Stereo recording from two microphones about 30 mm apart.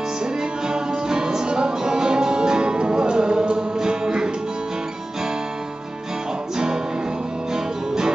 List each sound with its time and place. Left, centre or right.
0.2 s music: right
6.5 s music: right